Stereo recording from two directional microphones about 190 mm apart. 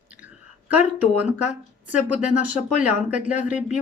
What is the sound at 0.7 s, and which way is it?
Speech, 5° right (ahead or behind).